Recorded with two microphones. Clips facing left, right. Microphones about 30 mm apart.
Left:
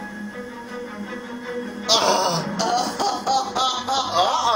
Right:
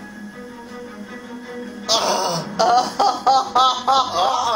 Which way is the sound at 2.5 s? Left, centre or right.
Centre.